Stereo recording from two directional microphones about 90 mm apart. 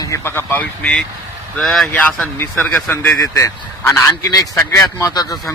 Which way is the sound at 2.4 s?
20° left (ahead or behind).